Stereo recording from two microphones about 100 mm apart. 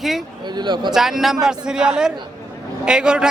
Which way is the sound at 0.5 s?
50° right (ahead or behind).